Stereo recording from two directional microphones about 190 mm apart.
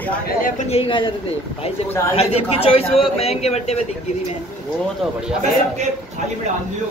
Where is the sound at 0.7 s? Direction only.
30° left (ahead or behind).